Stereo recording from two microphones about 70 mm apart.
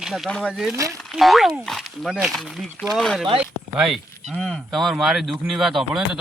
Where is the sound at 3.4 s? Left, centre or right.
Centre.